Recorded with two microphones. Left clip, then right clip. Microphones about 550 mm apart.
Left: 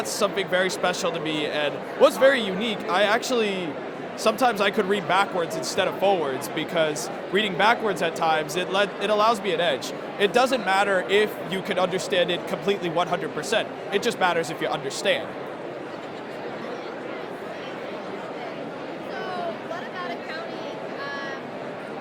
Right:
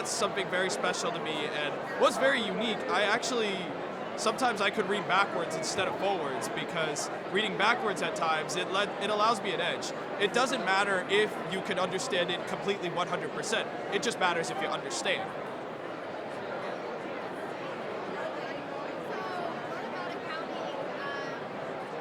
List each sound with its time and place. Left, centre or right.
0.2 s speech: centre